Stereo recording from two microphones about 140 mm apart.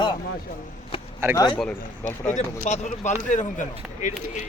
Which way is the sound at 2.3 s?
55° left (ahead or behind).